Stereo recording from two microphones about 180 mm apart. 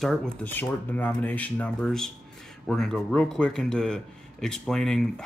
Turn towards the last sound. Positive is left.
turn(degrees=5)  # may be behind; listen again after turning